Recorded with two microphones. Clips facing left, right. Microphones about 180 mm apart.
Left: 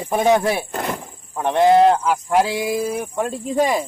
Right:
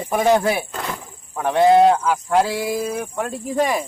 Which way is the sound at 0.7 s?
50° left (ahead or behind).